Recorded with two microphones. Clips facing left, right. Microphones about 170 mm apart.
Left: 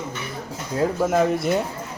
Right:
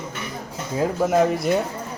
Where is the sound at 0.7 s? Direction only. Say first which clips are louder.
Right 1 dB; centre (ahead or behind).